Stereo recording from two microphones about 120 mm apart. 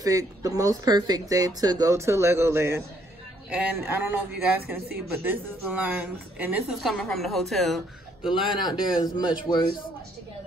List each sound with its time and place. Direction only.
0.0 s speech: 25° right (ahead or behind)
3.4 s speech: 10° right (ahead or behind)
6.8 s a woman's voice: centre (ahead or behind)
8.5 s a man's voice: 35° left (ahead or behind)